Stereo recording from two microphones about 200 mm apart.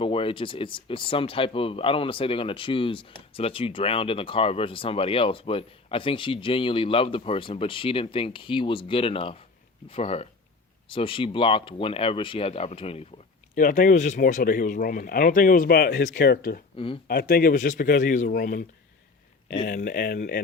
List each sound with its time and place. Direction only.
0.0 s speech: 25° left (ahead or behind)
13.6 s speech: 40° left (ahead or behind)
16.7 s speech: 25° left (ahead or behind)
17.1 s speech: 50° left (ahead or behind)
19.6 s speech: 45° left (ahead or behind)